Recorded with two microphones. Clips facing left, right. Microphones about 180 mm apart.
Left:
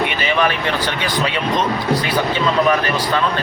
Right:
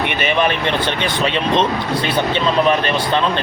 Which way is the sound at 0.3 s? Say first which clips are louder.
Even; 20° right (ahead or behind).